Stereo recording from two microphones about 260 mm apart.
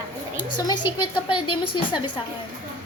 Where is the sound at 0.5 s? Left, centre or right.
Centre.